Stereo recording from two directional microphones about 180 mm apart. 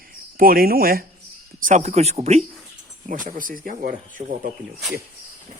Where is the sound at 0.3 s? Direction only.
55° right (ahead or behind).